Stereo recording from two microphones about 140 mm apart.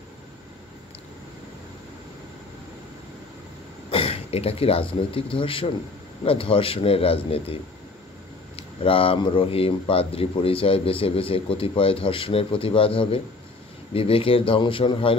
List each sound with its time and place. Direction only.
3.9 s speech: 40° left (ahead or behind)
8.5 s speech: 40° left (ahead or behind)